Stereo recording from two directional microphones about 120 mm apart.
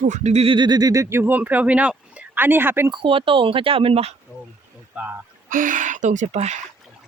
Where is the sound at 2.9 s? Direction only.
45° right (ahead or behind).